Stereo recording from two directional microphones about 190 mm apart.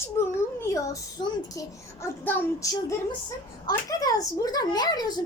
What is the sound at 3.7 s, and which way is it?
Speech, 15° left (ahead or behind).